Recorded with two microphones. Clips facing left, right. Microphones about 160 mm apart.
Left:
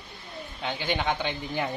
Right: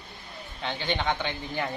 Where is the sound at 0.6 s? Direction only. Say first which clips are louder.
Left 1 dB; 10° left (ahead or behind).